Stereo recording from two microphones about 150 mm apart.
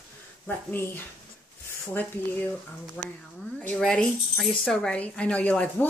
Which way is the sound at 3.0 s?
10° left (ahead or behind).